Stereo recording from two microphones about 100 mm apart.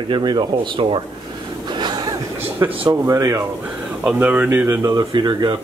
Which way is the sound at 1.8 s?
45° right (ahead or behind).